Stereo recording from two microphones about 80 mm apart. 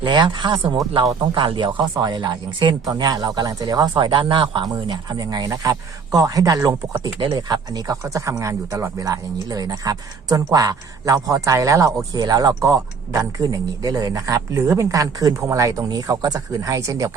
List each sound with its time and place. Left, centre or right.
0.0 s speech: right
1.2 s speech: right
2.0 s speech: right
2.9 s speech: right
4.6 s speech: right
7.2 s speech: right
8.0 s speech: right